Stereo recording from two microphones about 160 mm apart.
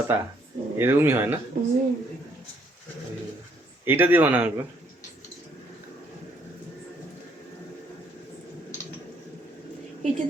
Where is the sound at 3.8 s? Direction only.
15° right (ahead or behind).